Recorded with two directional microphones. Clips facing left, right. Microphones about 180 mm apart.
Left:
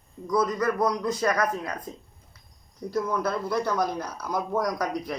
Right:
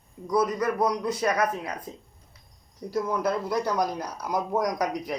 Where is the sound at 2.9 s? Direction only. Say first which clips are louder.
Right 1 dB; 15° right (ahead or behind).